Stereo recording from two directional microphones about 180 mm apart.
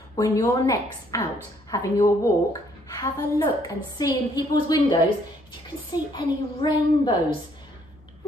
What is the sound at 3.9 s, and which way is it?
A woman's voice, 20° left (ahead or behind).